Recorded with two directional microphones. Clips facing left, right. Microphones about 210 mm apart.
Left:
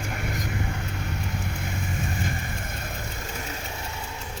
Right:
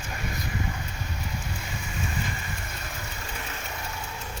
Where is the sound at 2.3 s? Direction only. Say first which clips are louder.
Left 3 dB; 50° left (ahead or behind).